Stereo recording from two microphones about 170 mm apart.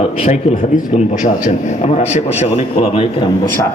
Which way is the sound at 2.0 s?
40° left (ahead or behind).